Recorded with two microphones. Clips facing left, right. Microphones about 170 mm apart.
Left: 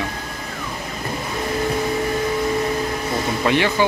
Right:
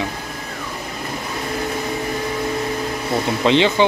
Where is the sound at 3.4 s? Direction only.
20° right (ahead or behind).